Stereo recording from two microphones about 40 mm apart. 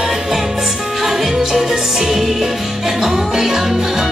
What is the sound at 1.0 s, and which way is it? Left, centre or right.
Music, centre.